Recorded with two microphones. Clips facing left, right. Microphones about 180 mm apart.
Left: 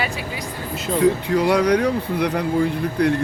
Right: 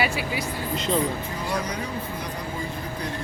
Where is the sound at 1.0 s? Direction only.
70° left (ahead or behind).